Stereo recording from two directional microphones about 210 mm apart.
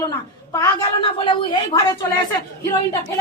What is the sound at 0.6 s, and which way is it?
A woman's voice, 20° left (ahead or behind).